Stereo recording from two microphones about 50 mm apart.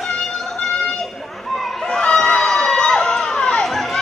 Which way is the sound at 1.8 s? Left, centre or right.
Centre.